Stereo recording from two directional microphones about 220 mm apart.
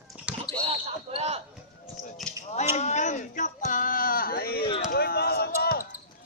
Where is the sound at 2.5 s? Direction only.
30° left (ahead or behind).